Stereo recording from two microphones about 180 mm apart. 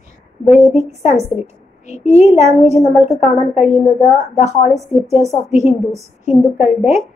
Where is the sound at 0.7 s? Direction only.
35° left (ahead or behind).